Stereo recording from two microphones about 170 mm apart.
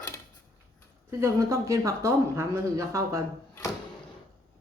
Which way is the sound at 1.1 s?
15° right (ahead or behind).